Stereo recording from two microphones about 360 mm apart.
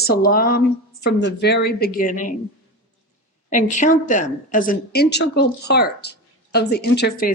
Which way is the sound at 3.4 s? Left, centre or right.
Centre.